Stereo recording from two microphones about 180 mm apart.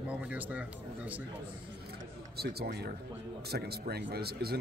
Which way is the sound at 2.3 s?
60° right (ahead or behind).